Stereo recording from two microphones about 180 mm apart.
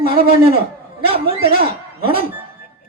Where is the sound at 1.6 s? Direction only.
60° right (ahead or behind).